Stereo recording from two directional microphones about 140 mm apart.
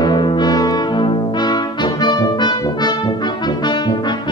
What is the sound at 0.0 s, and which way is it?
Brass instrument, 30° left (ahead or behind).